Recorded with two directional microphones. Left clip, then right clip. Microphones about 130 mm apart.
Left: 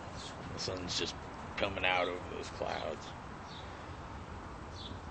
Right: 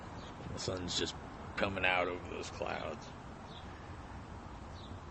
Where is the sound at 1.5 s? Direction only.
65° right (ahead or behind).